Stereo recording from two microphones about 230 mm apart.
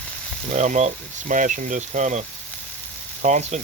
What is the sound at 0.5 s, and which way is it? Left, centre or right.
Speech, right.